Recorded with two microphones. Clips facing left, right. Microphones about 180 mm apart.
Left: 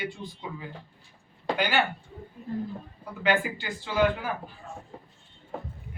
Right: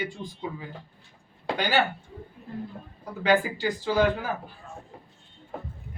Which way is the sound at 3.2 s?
40° right (ahead or behind).